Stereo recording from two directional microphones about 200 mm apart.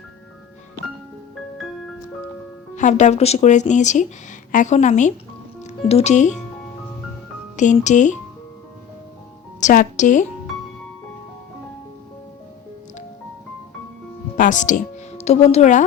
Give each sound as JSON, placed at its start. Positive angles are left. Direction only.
{"t": 2.7, "sound": "a woman's voice", "side_deg": 35}
{"t": 7.5, "sound": "speech", "side_deg": 35}
{"t": 9.6, "sound": "a woman's voice", "side_deg": 40}
{"t": 14.3, "sound": "a woman's voice", "side_deg": 40}